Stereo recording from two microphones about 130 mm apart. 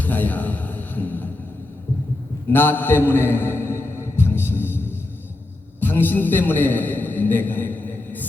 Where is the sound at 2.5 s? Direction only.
15° left (ahead or behind).